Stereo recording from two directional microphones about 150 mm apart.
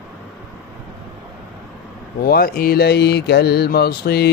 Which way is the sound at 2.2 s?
80° left.